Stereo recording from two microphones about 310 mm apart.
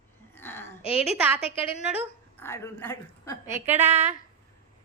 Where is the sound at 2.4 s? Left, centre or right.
Centre.